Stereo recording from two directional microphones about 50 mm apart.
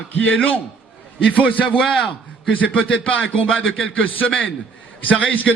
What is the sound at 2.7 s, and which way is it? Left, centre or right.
Speech, left.